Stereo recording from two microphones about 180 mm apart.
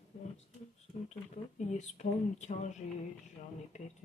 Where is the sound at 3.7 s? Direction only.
40° left (ahead or behind).